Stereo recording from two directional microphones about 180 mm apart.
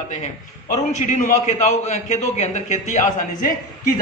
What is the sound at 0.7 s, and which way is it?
A man's voice, 40° left (ahead or behind).